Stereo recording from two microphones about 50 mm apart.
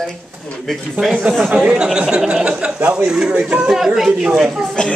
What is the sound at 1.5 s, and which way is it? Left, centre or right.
Speech, centre.